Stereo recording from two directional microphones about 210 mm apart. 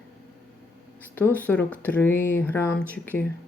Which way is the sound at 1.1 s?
10° left (ahead or behind).